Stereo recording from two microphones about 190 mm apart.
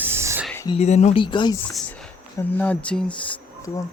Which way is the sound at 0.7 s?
35° left (ahead or behind).